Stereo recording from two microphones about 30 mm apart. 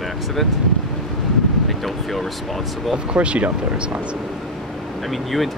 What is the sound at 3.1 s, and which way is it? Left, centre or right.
Speech, right.